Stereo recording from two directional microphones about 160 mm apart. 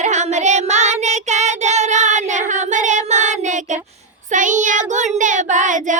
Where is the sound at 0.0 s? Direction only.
45° right (ahead or behind).